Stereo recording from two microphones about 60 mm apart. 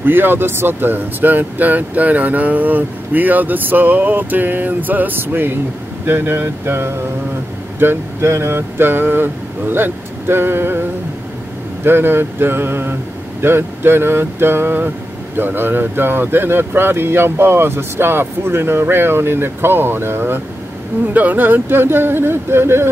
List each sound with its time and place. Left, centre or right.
0.0 s speech: right
11.8 s speech: right
21.1 s speech: right